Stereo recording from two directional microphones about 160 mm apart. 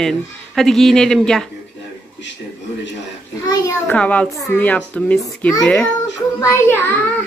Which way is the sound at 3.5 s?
20° left (ahead or behind).